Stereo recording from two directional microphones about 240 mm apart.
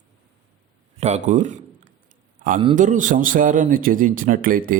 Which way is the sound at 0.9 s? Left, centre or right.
Right.